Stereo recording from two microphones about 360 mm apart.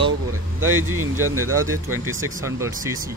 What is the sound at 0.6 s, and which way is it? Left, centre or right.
Speech, right.